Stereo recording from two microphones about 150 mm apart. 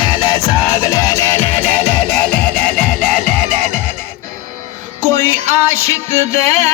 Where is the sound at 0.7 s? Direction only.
20° left (ahead or behind).